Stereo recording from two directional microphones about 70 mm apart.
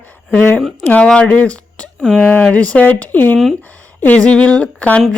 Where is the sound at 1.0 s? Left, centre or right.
Centre.